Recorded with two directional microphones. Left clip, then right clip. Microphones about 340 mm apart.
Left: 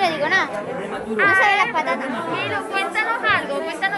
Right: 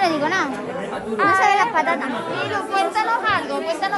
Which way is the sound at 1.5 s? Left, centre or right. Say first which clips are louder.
Right 1 dB; right.